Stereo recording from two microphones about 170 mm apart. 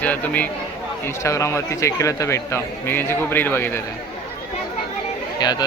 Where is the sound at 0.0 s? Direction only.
10° left (ahead or behind).